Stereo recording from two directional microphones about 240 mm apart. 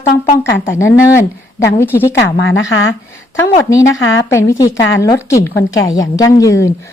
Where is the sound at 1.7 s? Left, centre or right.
Centre.